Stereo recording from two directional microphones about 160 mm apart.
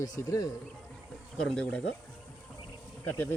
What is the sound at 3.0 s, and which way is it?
Speech, 10° left (ahead or behind).